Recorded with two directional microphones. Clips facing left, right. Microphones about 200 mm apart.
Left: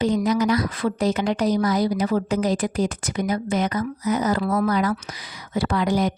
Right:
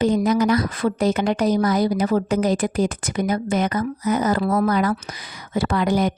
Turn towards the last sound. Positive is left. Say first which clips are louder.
# right 2 dB
turn(degrees=-55)  # may be behind; listen again after turning